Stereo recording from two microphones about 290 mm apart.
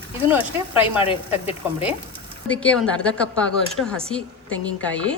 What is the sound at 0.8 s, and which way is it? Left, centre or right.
Speech, centre.